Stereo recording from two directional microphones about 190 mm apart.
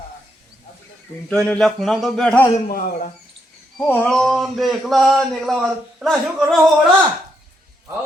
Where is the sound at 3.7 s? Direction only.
5° left (ahead or behind).